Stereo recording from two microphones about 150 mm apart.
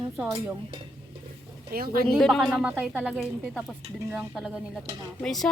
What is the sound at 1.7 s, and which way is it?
Speech, 80° right.